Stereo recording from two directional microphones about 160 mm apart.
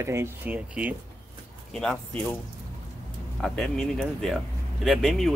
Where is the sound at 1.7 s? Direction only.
5° left (ahead or behind).